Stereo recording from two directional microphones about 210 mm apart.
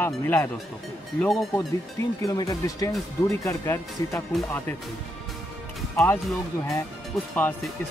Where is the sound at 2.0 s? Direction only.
15° left (ahead or behind).